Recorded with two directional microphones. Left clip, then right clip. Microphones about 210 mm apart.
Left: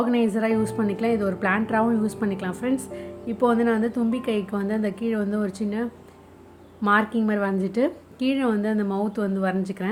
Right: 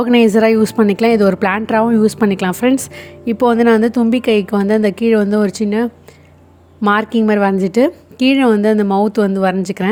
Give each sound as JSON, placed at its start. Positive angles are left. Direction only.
{"t": 0.0, "sound": "speech", "side_deg": -45}